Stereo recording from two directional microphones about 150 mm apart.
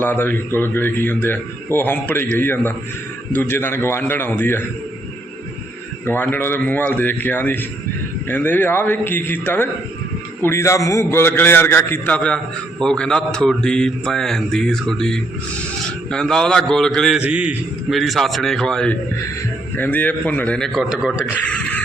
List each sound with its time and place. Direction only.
0.0 s a man's voice: 15° left (ahead or behind)
6.1 s a man's voice: 15° left (ahead or behind)
17.2 s a man's voice: 10° right (ahead or behind)
21.4 s a sound: 10° left (ahead or behind)